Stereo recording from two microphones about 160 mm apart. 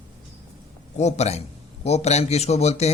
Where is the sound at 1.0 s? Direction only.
45° left (ahead or behind).